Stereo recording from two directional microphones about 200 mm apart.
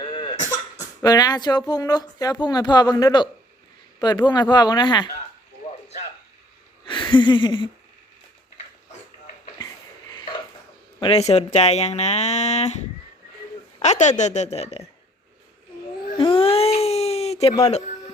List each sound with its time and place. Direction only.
0.0 s cough: 25° left (ahead or behind)
1.0 s speech: 20° left (ahead or behind)
6.8 s a sound: 25° left (ahead or behind)
11.0 s speech: 30° left (ahead or behind)
13.8 s speech: 35° left (ahead or behind)
16.1 s a sound: 25° left (ahead or behind)